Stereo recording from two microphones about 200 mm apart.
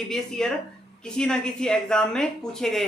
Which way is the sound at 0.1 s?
5° left (ahead or behind).